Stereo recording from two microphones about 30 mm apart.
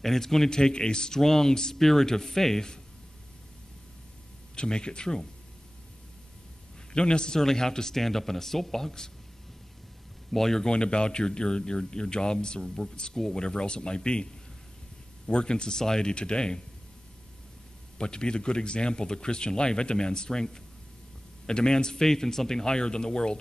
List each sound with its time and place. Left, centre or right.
0.0 s a man's voice: centre
0.5 s a man's voice: left
1.2 s a man's voice: centre
4.6 s a man's voice: left
6.9 s a man's voice: left
10.3 s a man's voice: centre
10.7 s a man's voice: left
13.1 s a man's voice: centre
13.4 s a man's voice: left
15.3 s a man's voice: left
17.9 s a man's voice: left